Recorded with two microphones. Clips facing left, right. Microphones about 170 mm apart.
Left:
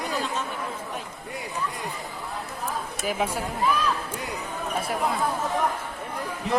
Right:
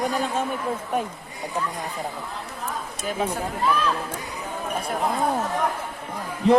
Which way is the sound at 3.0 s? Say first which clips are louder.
Right 1 dB; 10° left (ahead or behind).